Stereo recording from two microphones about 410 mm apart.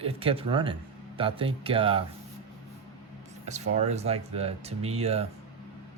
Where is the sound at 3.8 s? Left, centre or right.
Centre.